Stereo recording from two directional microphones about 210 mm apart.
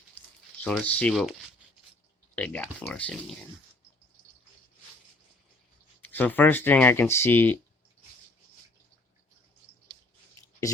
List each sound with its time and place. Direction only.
0.6 s speech: 5° left (ahead or behind)
6.0 s speech: 10° left (ahead or behind)
10.4 s a sound: 15° left (ahead or behind)